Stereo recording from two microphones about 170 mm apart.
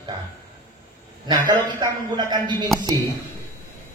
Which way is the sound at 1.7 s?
25° right (ahead or behind).